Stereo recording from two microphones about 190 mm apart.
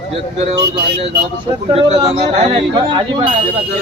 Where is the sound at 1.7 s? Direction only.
20° right (ahead or behind).